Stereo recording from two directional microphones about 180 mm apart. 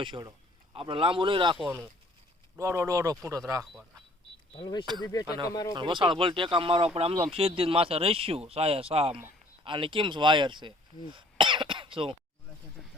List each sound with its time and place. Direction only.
0.0 s speech: 25° right (ahead or behind)
2.6 s speech: 15° right (ahead or behind)
3.6 s speech: centre (ahead or behind)
4.5 s speech: 25° left (ahead or behind)
5.7 s speech: 25° right (ahead or behind)
12.8 s a sound: centre (ahead or behind)